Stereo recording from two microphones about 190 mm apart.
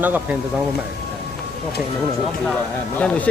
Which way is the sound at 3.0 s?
5° left (ahead or behind).